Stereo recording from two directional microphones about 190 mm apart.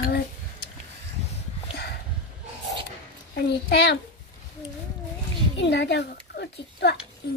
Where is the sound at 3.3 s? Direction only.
65° left (ahead or behind).